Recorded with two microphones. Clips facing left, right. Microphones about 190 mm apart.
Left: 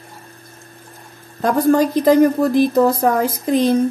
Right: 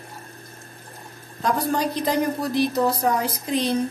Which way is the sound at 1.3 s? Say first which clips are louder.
Left 9 dB; 55° left (ahead or behind).